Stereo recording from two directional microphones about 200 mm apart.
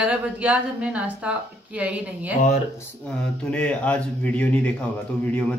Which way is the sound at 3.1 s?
5° left (ahead or behind).